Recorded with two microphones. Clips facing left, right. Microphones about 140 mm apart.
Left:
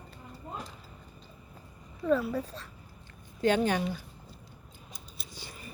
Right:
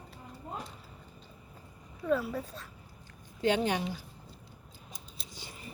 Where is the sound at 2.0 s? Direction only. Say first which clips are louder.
Left 3 dB; centre (ahead or behind).